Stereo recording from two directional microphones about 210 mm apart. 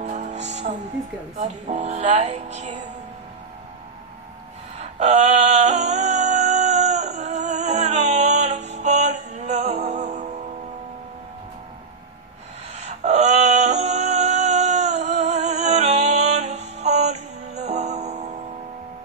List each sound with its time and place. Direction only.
0.0 s music: 35° right (ahead or behind)
4.7 s music: 35° right (ahead or behind)
12.8 s a sound: 35° right (ahead or behind)